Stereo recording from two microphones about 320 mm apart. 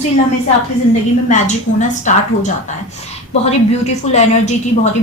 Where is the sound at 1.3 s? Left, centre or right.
Left.